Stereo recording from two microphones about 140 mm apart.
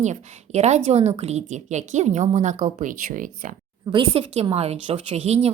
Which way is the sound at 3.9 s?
40° right (ahead or behind).